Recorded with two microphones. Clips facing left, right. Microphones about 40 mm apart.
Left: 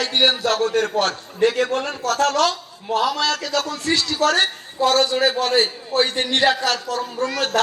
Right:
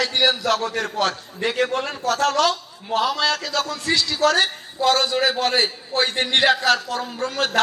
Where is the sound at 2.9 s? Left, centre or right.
Right.